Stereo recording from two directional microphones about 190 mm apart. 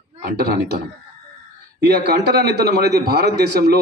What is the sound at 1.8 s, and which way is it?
A man's voice, 55° right (ahead or behind).